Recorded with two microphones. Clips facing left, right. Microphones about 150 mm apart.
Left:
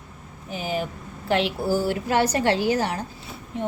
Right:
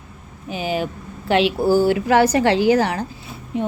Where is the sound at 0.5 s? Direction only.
90° right.